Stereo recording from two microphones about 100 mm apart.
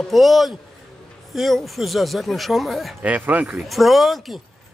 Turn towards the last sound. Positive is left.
turn(degrees=0)  # may be behind; listen again after turning